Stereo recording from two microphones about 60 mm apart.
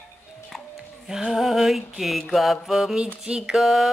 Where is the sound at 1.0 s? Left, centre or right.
Centre.